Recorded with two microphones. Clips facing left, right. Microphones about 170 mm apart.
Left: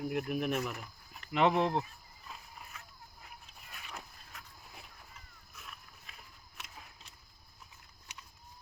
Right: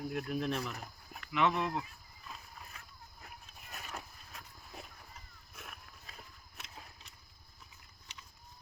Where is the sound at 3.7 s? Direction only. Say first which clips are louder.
Right 3 dB; 40° right (ahead or behind).